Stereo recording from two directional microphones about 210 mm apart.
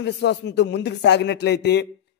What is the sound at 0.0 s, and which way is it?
A man's voice, 55° left (ahead or behind).